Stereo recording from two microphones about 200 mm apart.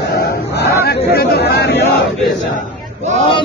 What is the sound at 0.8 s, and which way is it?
Speech, 50° left (ahead or behind).